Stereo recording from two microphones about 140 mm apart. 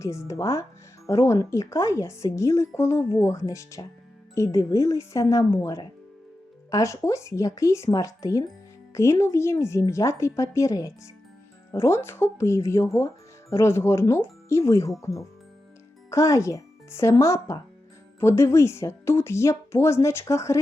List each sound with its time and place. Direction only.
0.0 s speech: 20° left (ahead or behind)
16.0 s speech: 20° left (ahead or behind)